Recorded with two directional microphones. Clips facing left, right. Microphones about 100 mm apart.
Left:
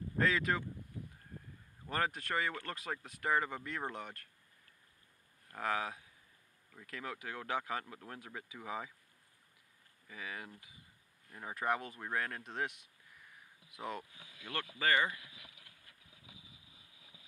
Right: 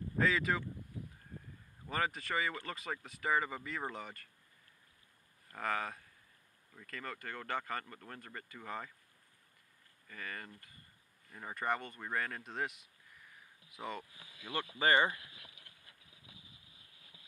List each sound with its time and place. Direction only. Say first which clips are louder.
0.2 s speech: even; centre (ahead or behind)
1.9 s speech: even; centre (ahead or behind)
5.5 s speech: left 1 dB; centre (ahead or behind)
10.0 s speech: even; 5° left (ahead or behind)
14.5 s speech: right 3 dB; 15° right (ahead or behind)
14.9 s speech: right 3 dB; 30° right (ahead or behind)